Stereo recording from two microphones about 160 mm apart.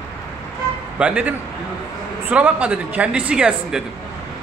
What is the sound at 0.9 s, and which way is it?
Speech, 10° right (ahead or behind).